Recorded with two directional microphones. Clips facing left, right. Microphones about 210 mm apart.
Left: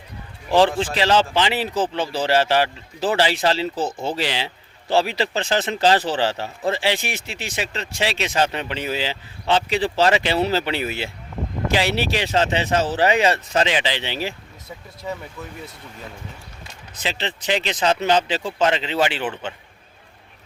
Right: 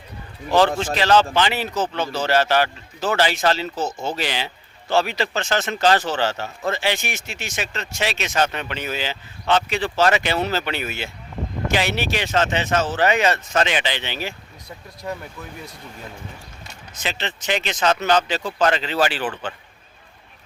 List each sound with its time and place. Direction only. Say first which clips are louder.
0.8 s speech: right 1 dB; 30° left (ahead or behind)
15.0 s speech: even; centre (ahead or behind)
17.0 s speech: left 1 dB; 30° left (ahead or behind)